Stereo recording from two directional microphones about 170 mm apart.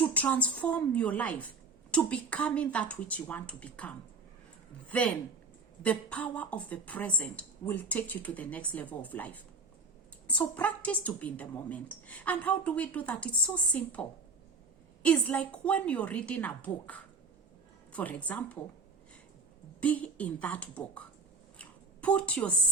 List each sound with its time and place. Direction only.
0.0 s a woman's voice: 10° left (ahead or behind)
15.0 s a woman's voice: 5° left (ahead or behind)
19.8 s a woman's voice: 10° left (ahead or behind)
21.6 s a sound: 5° left (ahead or behind)